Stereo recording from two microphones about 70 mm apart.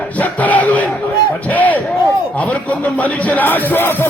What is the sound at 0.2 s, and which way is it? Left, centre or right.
Crowd, left.